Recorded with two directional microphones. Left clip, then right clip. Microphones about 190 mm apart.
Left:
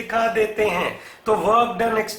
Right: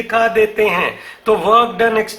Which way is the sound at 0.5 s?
35° right (ahead or behind).